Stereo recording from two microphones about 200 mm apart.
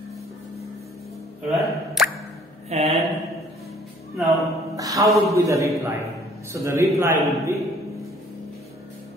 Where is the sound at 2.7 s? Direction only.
30° right (ahead or behind).